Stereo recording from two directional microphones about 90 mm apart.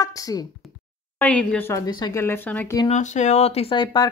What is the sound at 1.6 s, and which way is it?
Speech, 35° left (ahead or behind).